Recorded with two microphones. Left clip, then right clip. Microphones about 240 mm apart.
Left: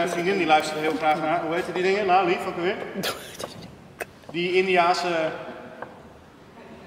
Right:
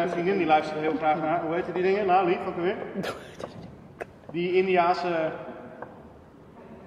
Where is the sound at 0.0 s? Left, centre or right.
Centre.